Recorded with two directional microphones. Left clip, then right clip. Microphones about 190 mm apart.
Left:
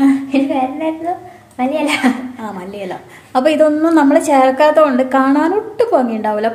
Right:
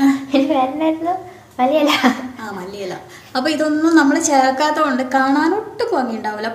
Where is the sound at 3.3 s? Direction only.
50° left (ahead or behind).